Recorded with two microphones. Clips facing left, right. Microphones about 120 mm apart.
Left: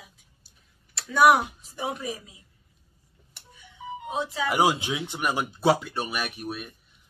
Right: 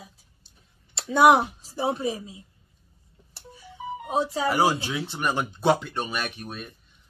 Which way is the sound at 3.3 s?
35° right (ahead or behind).